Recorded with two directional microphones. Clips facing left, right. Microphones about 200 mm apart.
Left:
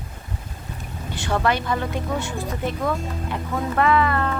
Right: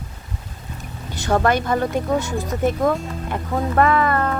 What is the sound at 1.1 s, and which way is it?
Speech, 45° right (ahead or behind).